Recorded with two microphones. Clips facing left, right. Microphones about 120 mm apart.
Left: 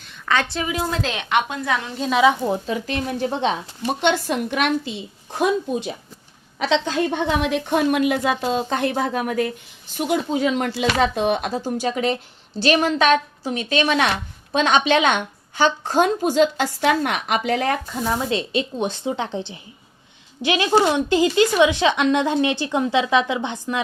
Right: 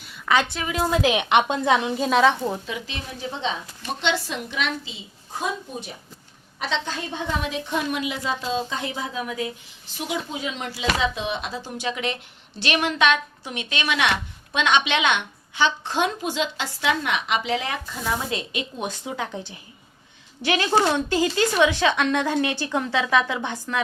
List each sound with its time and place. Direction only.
0.0 s a sound: 10° right (ahead or behind)
0.5 s a woman's voice: 5° left (ahead or behind)
0.9 s a woman's voice: 10° right (ahead or behind)
2.0 s a woman's voice: centre (ahead or behind)
2.6 s a woman's voice: 45° left (ahead or behind); by 5.9 s 70° left (ahead or behind)
6.6 s a woman's voice: 80° left; by 17.7 s 50° left (ahead or behind)
18.3 s speech: 30° left (ahead or behind)